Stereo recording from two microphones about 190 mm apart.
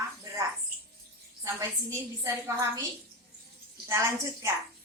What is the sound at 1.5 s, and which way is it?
A woman's voice, 15° right (ahead or behind).